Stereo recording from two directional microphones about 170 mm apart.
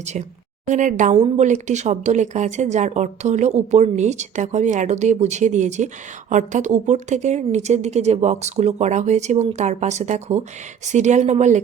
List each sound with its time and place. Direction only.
0.0 s speech: 45° right (ahead or behind)